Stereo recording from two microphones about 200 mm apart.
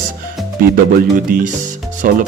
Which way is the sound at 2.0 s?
45° right (ahead or behind).